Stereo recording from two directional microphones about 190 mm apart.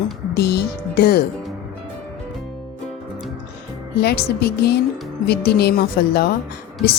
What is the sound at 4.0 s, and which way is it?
Speech, 55° left (ahead or behind).